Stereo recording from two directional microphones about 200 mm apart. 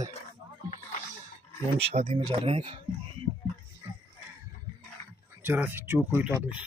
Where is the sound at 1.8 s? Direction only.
30° right (ahead or behind).